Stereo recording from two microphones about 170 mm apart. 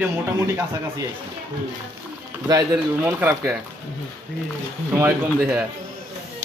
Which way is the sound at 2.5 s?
15° right (ahead or behind).